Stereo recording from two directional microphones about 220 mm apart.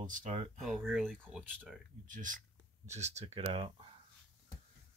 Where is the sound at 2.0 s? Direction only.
35° right (ahead or behind).